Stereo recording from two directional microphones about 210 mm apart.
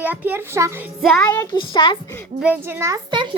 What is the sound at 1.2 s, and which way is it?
Speech, 15° left (ahead or behind).